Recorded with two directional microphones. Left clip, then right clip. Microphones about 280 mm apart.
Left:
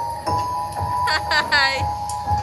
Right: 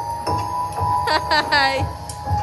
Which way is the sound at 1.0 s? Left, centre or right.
Centre.